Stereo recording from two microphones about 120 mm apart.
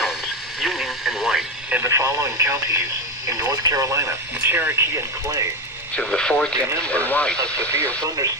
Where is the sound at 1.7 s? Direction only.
20° right (ahead or behind).